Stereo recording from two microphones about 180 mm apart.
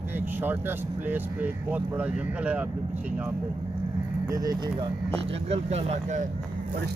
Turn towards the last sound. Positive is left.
turn(degrees=-35)  # may be behind; listen again after turning